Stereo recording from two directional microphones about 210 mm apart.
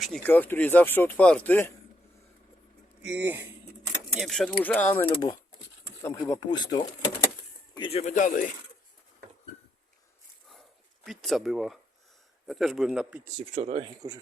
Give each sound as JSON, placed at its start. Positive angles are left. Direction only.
{"t": 0.0, "sound": "speech", "side_deg": 5}
{"t": 3.0, "sound": "speech", "side_deg": -10}
{"t": 4.2, "sound": "speech", "side_deg": 0}
{"t": 5.1, "sound": "speech", "side_deg": 20}
{"t": 11.0, "sound": "speech", "side_deg": 0}
{"t": 13.5, "sound": "speech", "side_deg": -30}